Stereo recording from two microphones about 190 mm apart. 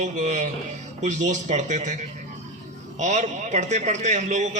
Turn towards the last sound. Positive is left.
turn(degrees=-35)  # may be behind; listen again after turning